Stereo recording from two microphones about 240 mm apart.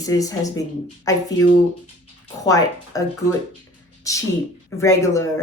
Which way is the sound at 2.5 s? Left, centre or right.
Centre.